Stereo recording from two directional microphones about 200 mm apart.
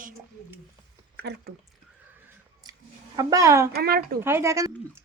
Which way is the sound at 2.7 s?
20° right (ahead or behind).